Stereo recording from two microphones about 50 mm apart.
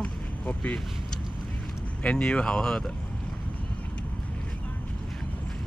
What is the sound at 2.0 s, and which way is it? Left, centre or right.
Speech, left.